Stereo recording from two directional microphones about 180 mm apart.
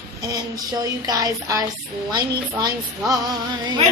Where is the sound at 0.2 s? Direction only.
20° right (ahead or behind).